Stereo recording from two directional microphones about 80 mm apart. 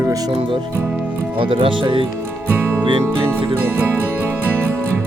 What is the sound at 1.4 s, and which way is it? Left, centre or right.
Speech, right.